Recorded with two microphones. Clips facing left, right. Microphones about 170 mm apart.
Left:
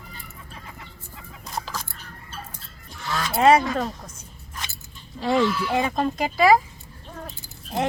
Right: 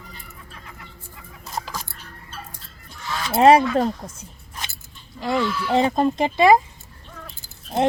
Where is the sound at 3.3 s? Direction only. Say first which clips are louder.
Right 4 dB; 30° right (ahead or behind).